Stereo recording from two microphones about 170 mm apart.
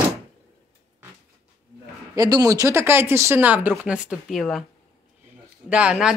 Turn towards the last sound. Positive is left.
turn(degrees=-5)  # may be behind; listen again after turning